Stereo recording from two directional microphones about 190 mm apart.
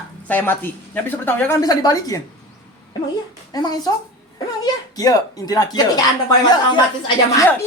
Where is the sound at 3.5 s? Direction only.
20° left (ahead or behind).